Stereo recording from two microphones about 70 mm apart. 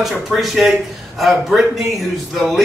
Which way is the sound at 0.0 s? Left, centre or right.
Centre.